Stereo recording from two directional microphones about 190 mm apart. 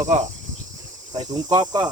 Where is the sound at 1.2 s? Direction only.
20° right (ahead or behind).